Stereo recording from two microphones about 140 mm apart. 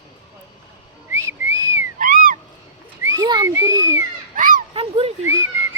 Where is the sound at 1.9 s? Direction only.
80° right.